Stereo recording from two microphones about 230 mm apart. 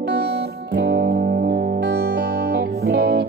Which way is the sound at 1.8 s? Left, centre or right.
Right.